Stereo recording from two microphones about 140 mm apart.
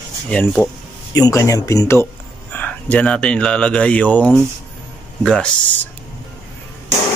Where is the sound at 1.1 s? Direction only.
25° left (ahead or behind); by 5.5 s 5° left (ahead or behind).